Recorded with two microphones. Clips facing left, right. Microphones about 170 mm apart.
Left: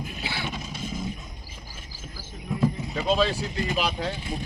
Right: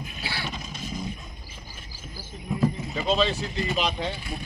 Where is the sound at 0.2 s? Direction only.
15° left (ahead or behind).